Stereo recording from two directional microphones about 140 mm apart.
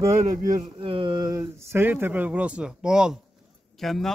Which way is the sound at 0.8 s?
40° right (ahead or behind).